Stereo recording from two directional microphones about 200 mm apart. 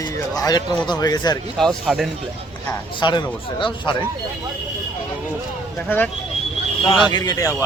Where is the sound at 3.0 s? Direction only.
20° left (ahead or behind).